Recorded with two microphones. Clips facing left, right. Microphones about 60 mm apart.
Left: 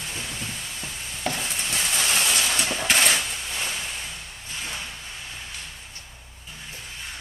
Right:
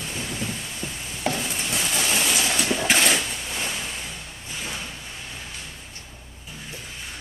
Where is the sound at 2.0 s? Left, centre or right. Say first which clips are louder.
Even; centre.